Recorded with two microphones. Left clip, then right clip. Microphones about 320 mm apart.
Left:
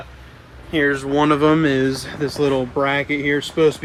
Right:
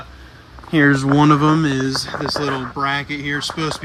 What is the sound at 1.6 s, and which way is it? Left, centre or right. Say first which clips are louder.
Speech: left 2 dB; centre.